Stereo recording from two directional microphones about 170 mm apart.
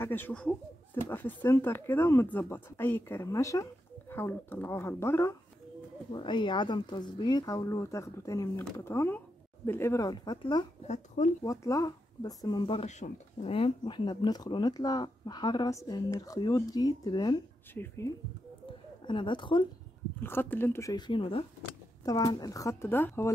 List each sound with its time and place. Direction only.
0.0 s speech: 10° left (ahead or behind)
6.1 s speech: 30° left (ahead or behind)
10.9 s speech: 45° left (ahead or behind)
11.4 s speech: 20° left (ahead or behind)
19.0 s speech: 30° left (ahead or behind)
20.2 s speech: 15° left (ahead or behind)
21.1 s speech: 30° left (ahead or behind)
22.0 s speech: 20° left (ahead or behind)